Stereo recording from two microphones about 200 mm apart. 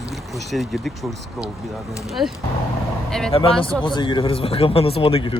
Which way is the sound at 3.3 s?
25° left (ahead or behind).